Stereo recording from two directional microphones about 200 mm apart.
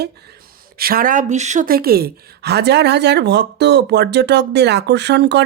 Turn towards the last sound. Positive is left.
turn(degrees=-60)  # may be behind; listen again after turning